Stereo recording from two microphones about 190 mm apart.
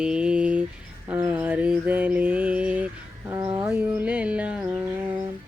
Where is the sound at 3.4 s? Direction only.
30° right (ahead or behind).